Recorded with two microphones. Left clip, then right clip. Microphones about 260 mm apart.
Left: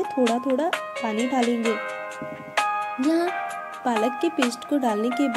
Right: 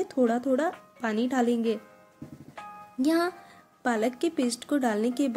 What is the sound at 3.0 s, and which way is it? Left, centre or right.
Speech, centre.